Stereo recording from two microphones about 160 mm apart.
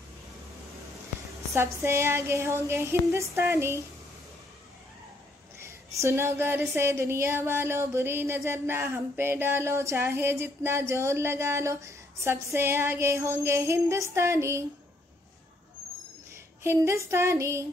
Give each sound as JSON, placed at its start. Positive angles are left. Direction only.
{"t": 1.5, "sound": "speech", "side_deg": -15}
{"t": 5.6, "sound": "speech", "side_deg": -20}
{"t": 16.6, "sound": "speech", "side_deg": -15}